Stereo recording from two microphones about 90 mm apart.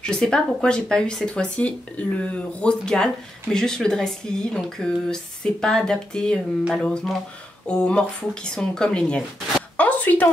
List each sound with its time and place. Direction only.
0.0 s speech: 10° left (ahead or behind)